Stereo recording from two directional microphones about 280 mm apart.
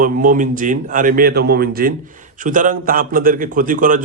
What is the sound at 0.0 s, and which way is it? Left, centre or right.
A man's voice, right.